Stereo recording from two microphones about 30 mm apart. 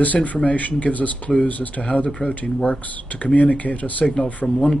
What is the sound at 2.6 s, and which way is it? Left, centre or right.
Speech, left.